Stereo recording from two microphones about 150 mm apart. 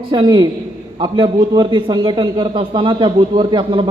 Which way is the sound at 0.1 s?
30° right (ahead or behind).